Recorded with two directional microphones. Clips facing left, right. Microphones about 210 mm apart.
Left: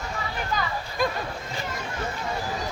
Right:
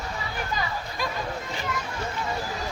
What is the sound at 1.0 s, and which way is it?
Chatter, 50° left (ahead or behind).